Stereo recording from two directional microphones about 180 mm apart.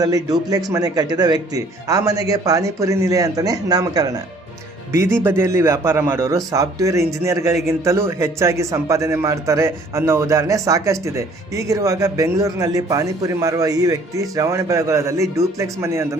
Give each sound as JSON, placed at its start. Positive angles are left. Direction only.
{"t": 0.0, "sound": "a man's voice", "side_deg": -20}